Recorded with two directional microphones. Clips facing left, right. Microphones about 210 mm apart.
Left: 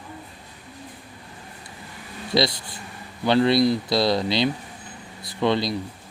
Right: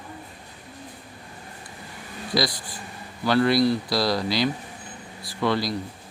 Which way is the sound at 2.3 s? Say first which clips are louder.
Left 3 dB; 25° left (ahead or behind).